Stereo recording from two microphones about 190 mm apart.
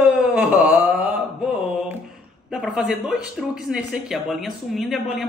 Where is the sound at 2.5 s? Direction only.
Centre (ahead or behind).